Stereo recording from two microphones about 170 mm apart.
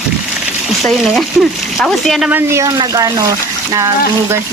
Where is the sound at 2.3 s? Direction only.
15° right (ahead or behind).